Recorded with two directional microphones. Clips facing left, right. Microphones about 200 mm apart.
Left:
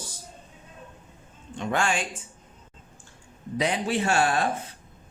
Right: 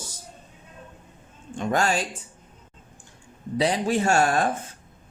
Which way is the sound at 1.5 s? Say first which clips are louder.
Right 3 dB; 45° right (ahead or behind).